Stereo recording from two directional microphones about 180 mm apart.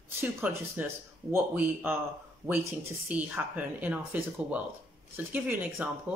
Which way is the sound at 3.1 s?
10° right (ahead or behind).